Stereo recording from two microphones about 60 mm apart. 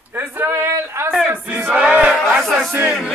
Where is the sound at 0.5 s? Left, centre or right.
Right.